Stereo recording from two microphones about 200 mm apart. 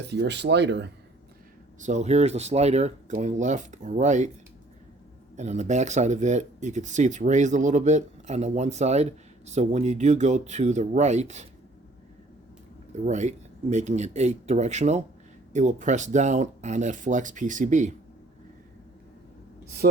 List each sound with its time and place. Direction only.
0.1 s speech: 60° right (ahead or behind)
1.8 s speech: 35° right (ahead or behind)
5.4 s speech: 35° right (ahead or behind)
13.1 s speech: 35° right (ahead or behind)
19.8 s speech: 50° right (ahead or behind)